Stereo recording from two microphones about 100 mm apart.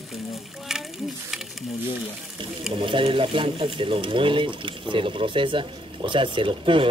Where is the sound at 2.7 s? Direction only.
60° right (ahead or behind).